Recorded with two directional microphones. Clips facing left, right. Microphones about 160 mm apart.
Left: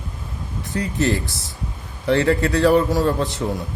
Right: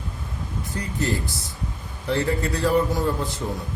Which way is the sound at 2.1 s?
75° left (ahead or behind).